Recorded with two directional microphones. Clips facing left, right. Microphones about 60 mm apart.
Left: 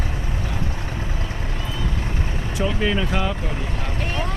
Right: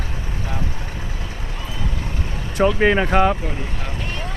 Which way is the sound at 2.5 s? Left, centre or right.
Right.